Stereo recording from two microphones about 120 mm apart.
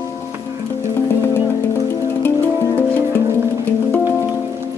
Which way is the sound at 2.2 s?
20° left (ahead or behind).